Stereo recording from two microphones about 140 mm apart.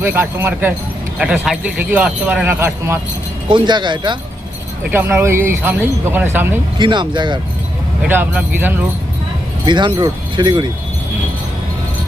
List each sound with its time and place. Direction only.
0.0 s speech: 15° right (ahead or behind)
3.5 s speech: 35° right (ahead or behind)
4.9 s speech: 15° right (ahead or behind)
6.7 s speech: 35° right (ahead or behind)
8.0 s speech: 15° right (ahead or behind)
9.6 s speech: 35° right (ahead or behind)